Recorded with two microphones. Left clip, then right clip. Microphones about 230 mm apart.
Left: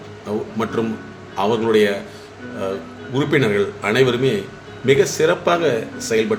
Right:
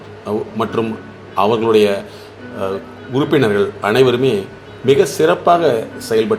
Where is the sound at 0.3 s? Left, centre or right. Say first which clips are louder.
Right 4 dB; centre.